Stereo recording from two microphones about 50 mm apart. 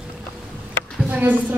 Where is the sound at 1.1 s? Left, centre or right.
Right.